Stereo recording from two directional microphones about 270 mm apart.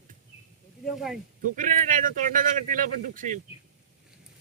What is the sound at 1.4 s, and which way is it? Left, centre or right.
Speech, right.